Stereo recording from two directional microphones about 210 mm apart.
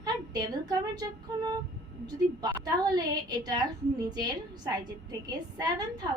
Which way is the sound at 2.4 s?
20° right (ahead or behind).